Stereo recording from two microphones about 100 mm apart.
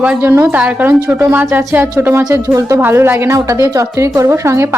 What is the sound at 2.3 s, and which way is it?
Speech, 35° right (ahead or behind).